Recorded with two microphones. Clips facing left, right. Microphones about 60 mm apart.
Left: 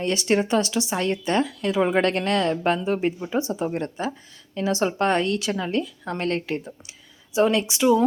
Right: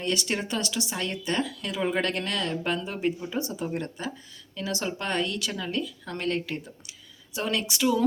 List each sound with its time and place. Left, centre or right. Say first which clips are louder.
0.0 s a woman's voice: left 7 dB; left